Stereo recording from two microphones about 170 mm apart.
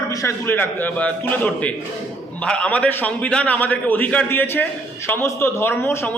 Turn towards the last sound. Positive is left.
turn(degrees=15)  # may be behind; listen again after turning